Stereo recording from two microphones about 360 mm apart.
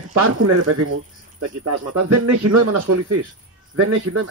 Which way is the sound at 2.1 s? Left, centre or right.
Right.